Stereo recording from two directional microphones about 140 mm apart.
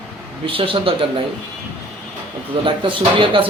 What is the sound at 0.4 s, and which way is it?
Speech, 40° right (ahead or behind).